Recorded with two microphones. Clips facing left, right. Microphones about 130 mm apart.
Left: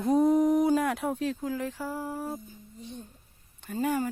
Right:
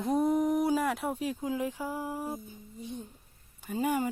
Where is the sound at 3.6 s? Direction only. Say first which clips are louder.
Left 1 dB; 10° right (ahead or behind).